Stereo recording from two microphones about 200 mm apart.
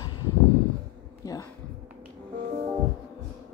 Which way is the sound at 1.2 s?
15° left (ahead or behind).